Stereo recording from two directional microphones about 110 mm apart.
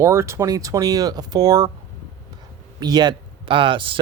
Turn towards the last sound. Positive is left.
turn(degrees=-50)  # may be behind; listen again after turning